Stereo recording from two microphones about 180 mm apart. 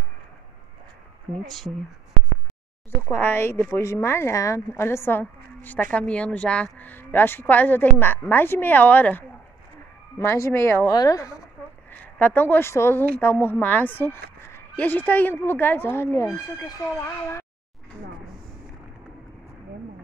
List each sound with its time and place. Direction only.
1.3 s speech: centre (ahead or behind)
3.0 s a woman's voice: 10° left (ahead or behind)
11.9 s a woman's voice: 10° left (ahead or behind)